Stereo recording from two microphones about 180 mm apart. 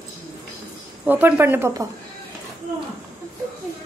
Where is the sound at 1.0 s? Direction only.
10° right (ahead or behind).